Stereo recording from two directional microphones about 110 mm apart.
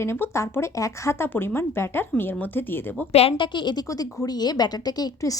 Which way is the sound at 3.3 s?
45° left (ahead or behind).